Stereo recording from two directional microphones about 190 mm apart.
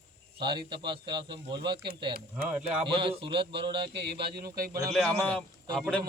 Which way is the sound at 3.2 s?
25° right (ahead or behind).